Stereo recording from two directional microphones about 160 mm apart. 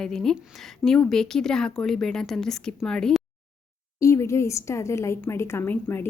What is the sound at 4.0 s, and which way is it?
A woman's voice, 20° left (ahead or behind).